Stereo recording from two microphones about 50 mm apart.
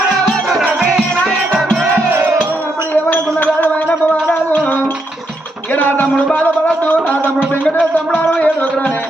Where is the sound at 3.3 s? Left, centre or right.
Left.